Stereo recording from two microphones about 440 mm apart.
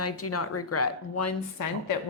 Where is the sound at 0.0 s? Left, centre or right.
Left.